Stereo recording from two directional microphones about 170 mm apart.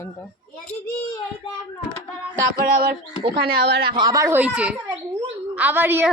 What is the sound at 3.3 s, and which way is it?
Speech, 70° right (ahead or behind).